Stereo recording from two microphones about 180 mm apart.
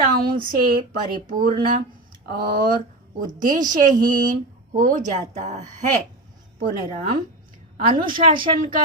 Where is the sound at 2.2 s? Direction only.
55° right (ahead or behind).